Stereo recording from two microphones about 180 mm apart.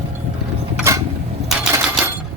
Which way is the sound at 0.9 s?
15° right (ahead or behind).